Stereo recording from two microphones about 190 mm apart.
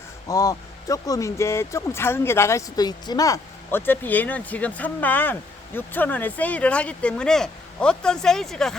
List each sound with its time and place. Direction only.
0.3 s speech: 20° left (ahead or behind); by 8.7 s centre (ahead or behind)